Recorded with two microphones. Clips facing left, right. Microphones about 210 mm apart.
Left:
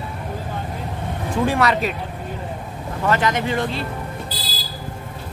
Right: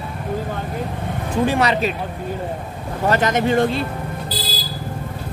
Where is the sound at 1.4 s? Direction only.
25° right (ahead or behind).